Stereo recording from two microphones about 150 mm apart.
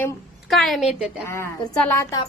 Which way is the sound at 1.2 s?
15° left (ahead or behind).